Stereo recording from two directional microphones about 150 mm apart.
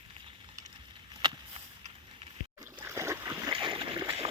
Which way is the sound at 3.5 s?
35° right (ahead or behind).